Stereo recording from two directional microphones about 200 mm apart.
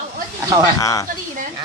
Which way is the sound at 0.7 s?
15° left (ahead or behind).